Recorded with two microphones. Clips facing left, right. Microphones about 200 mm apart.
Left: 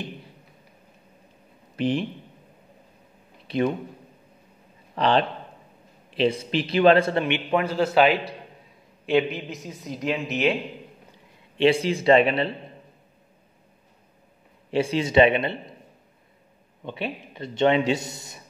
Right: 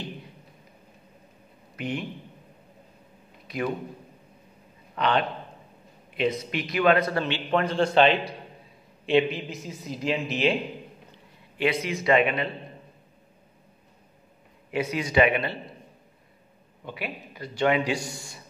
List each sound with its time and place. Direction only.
1.8 s speech: 30° left (ahead or behind)
3.4 s a man's voice: 30° left (ahead or behind)
4.9 s a man's voice: 30° left (ahead or behind)
7.6 s speech: 5° left (ahead or behind)
11.5 s speech: 30° left (ahead or behind)
14.7 s a man's voice: 30° left (ahead or behind)
16.8 s a man's voice: 25° left (ahead or behind)